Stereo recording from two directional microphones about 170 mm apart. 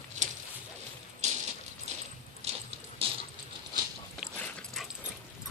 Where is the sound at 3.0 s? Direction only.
35° right (ahead or behind).